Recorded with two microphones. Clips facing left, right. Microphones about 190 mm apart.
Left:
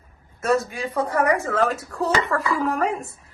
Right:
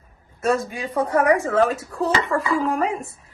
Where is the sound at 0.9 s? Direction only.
20° right (ahead or behind).